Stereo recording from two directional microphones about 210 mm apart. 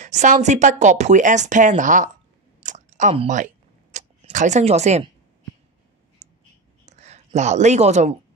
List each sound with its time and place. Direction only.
0.0 s speech: 35° right (ahead or behind)
2.6 s chewing: 35° right (ahead or behind)
6.2 s a sound: 35° right (ahead or behind)
6.9 s speech: 30° right (ahead or behind)